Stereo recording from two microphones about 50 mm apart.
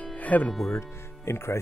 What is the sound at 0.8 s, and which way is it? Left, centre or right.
Music, left.